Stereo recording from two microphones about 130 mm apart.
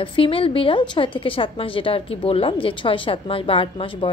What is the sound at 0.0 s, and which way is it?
A woman's voice, 40° left (ahead or behind).